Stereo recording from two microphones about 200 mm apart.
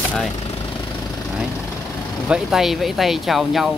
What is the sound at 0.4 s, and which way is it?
Vehicle, 20° left (ahead or behind).